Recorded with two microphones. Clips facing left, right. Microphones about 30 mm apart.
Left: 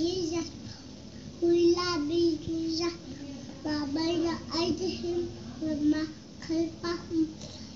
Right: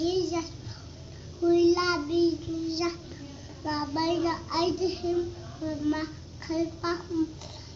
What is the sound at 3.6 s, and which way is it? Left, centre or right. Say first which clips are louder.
Child singing: right 1 dB; right.